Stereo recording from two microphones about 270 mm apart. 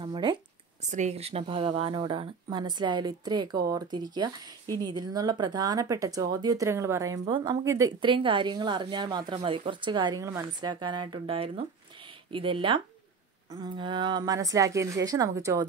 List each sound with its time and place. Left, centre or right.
0.0 s a woman's voice: centre